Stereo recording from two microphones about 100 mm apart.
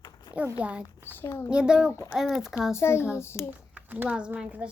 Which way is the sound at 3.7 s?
15° right (ahead or behind).